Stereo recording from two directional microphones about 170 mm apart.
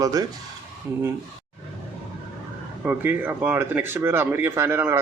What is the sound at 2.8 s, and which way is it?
Speech, 10° right (ahead or behind).